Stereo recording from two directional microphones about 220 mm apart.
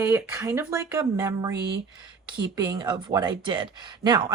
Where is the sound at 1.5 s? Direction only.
50° right (ahead or behind).